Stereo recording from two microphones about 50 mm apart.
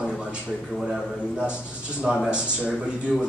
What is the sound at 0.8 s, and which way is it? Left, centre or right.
Speech, centre.